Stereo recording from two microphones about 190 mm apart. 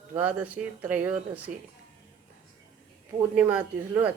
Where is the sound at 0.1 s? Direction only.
10° right (ahead or behind).